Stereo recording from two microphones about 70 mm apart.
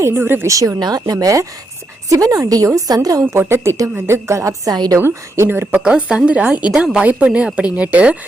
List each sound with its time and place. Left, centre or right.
0.2 s a woman's voice: right
0.4 s speech: right
0.8 s speech: right
3.3 s a woman's voice: right
4.7 s a woman's voice: right
4.9 s a woman's voice: right
5.8 s a woman's voice: centre